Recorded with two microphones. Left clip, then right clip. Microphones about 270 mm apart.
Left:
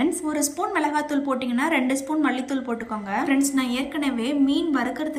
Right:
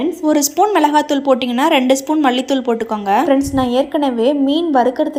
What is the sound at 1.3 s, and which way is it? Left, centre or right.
A woman's voice, right.